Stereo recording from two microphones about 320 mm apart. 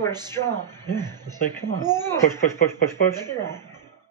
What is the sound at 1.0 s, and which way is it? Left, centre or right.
Speech, centre.